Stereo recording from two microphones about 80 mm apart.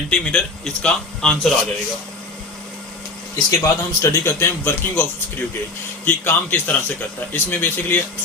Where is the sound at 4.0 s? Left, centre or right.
Left.